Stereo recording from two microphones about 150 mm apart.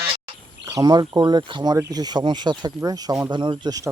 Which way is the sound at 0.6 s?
25° right (ahead or behind).